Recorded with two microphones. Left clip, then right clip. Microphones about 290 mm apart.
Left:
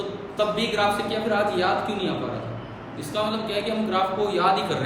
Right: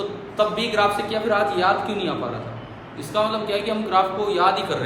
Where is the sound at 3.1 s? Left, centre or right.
Centre.